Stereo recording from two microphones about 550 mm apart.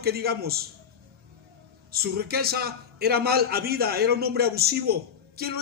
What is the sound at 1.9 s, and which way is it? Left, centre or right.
A man's voice, centre.